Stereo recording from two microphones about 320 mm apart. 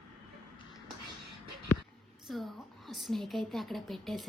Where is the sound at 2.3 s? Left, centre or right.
Centre.